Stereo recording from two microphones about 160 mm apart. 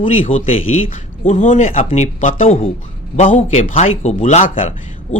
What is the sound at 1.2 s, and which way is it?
A man's voice, 50° left (ahead or behind).